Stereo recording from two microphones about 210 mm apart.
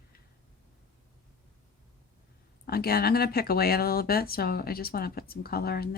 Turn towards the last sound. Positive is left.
turn(degrees=50)  # may be behind; listen again after turning